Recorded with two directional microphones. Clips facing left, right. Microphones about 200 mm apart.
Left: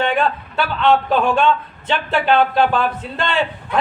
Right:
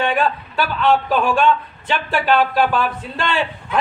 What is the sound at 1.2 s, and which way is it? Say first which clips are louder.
A man's voice: even; 20° left (ahead or behind).